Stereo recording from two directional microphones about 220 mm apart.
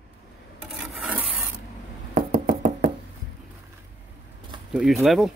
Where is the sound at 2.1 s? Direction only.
40° right (ahead or behind).